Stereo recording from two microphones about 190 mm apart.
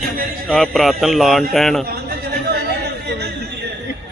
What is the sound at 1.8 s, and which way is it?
Chatter, 55° right (ahead or behind).